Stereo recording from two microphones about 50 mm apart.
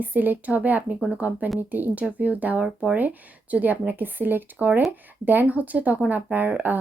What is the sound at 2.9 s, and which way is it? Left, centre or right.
Speech, right.